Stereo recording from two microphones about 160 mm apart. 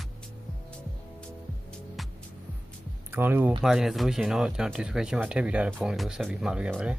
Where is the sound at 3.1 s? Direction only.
15° right (ahead or behind).